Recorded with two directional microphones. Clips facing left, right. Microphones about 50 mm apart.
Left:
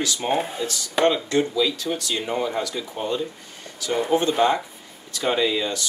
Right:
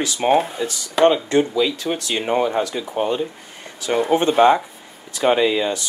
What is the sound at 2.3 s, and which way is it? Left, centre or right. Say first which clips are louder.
Speech: right 7 dB; right.